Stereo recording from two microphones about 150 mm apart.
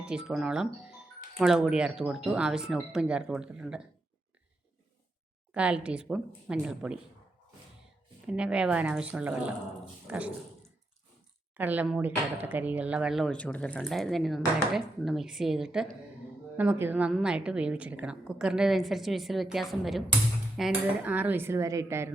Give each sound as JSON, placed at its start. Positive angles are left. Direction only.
{"t": 0.0, "sound": "speech", "side_deg": -5}
{"t": 5.5, "sound": "dishes", "side_deg": -10}
{"t": 8.3, "sound": "dishes", "side_deg": -5}
{"t": 10.1, "sound": "speech", "side_deg": -10}
{"t": 11.5, "sound": "dishes", "side_deg": -10}
{"t": 11.9, "sound": "speech", "side_deg": -10}
{"t": 20.6, "sound": "dishes", "side_deg": -5}